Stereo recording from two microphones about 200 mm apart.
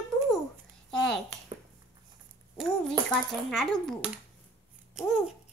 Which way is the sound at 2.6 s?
Centre (ahead or behind).